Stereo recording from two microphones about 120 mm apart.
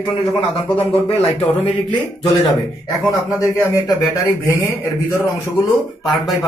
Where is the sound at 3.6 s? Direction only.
25° left (ahead or behind).